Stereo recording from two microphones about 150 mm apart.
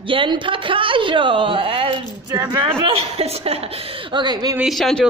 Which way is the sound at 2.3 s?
25° right (ahead or behind).